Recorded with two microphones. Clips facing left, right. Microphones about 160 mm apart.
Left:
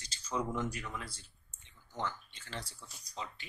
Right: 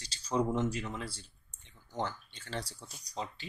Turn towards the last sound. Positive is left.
turn(degrees=-35)  # may be behind; listen again after turning